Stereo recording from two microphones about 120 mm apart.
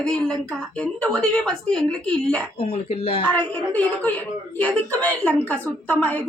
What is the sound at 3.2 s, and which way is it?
A woman's voice, 15° left (ahead or behind).